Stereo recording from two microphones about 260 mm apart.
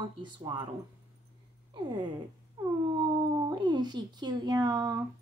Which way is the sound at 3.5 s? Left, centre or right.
Centre.